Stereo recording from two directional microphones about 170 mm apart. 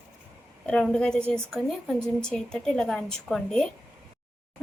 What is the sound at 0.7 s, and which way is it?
A woman's voice, 5° left (ahead or behind).